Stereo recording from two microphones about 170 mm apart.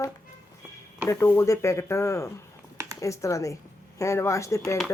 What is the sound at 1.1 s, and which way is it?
A woman's voice, 15° left (ahead or behind).